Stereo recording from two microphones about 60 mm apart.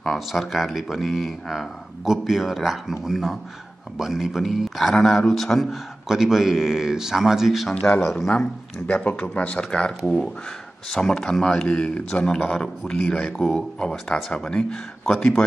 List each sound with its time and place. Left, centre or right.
0.0 s a man's voice: centre
8.8 s a man's voice: left